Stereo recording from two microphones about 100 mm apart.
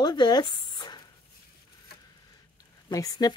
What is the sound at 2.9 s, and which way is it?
Speech, 40° left (ahead or behind).